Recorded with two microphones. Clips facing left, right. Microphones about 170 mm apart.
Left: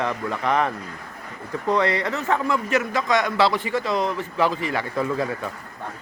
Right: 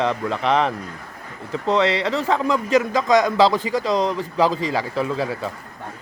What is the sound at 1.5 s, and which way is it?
Speech, 20° right (ahead or behind).